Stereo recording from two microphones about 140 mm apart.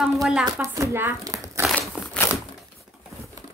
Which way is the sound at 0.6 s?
20° right (ahead or behind).